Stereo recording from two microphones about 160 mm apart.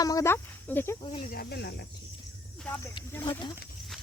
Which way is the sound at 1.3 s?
75° left (ahead or behind).